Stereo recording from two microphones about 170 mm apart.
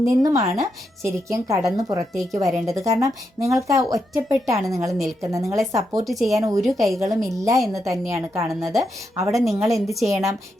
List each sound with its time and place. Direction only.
0.0 s a woman's voice: 20° right (ahead or behind)
6.1 s a woman's voice: centre (ahead or behind)
6.3 s speech: 20° right (ahead or behind)
6.6 s a woman's voice: centre (ahead or behind)
7.0 s a woman's voice: 20° right (ahead or behind)